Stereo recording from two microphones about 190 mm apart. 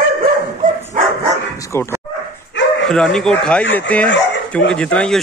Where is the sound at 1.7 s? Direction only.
15° left (ahead or behind).